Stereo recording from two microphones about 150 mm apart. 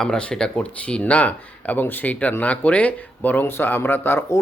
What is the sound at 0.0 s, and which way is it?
Speech, 5° left (ahead or behind).